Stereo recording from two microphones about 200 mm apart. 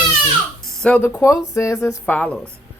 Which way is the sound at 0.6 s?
5° left (ahead or behind).